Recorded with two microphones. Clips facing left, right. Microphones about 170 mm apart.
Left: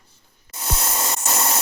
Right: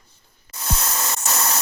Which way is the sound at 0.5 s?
15° left (ahead or behind).